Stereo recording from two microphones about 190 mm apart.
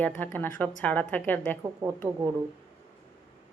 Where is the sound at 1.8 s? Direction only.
20° right (ahead or behind).